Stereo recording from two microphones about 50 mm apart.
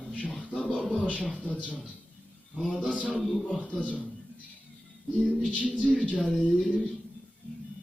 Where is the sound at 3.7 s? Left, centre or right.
Left.